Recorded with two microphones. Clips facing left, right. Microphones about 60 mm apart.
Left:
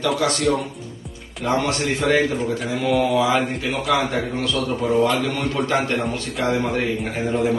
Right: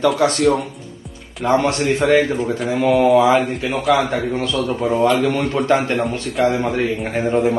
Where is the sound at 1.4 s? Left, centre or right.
Right.